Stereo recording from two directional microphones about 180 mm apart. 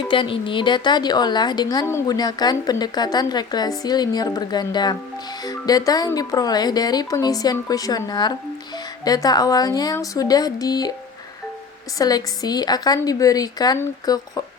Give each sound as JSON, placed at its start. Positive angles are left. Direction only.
{"t": 0.1, "sound": "speech", "side_deg": 25}
{"t": 11.9, "sound": "speech", "side_deg": 20}